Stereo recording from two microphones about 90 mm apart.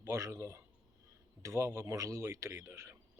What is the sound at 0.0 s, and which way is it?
A man's voice, 35° right (ahead or behind).